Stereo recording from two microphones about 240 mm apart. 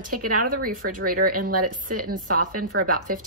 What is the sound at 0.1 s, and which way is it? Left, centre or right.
Speech, right.